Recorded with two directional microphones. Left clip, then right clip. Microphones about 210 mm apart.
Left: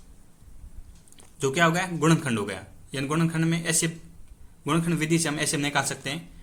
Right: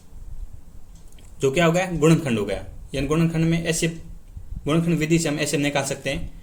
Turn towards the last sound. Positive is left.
turn(degrees=15)  # may be behind; listen again after turning